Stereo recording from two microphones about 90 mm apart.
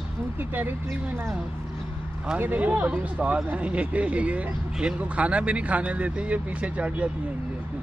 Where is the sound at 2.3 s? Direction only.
20° right (ahead or behind).